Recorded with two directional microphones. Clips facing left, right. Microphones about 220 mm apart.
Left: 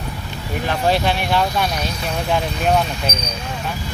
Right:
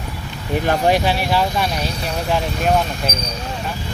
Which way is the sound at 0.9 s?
10° right (ahead or behind).